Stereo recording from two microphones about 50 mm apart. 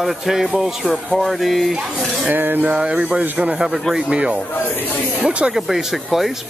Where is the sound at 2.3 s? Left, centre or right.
Right.